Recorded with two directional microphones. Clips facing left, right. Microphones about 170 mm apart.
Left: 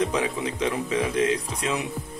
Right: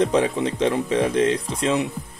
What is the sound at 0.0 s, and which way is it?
Speech, 35° right (ahead or behind).